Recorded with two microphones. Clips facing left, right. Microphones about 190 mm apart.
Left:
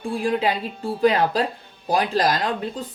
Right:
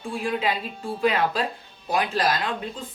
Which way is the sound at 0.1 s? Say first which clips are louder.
Left 4 dB; 35° left (ahead or behind).